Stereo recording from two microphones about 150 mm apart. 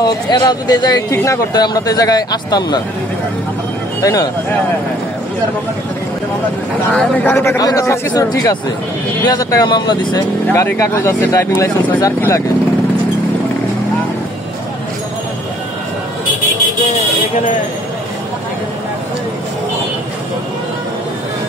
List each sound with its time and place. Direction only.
0.0 s speech: 25° left (ahead or behind)
4.0 s speech: 25° left (ahead or behind)
6.9 s speech: 5° left (ahead or behind); by 10.2 s 30° left (ahead or behind)
10.5 s speech: 10° left (ahead or behind)